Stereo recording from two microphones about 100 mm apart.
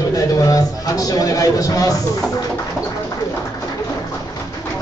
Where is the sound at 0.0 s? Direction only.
35° left (ahead or behind).